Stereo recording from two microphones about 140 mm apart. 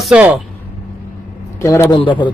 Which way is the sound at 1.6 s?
20° left (ahead or behind).